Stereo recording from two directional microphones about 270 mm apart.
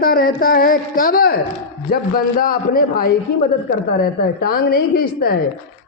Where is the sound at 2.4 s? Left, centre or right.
Left.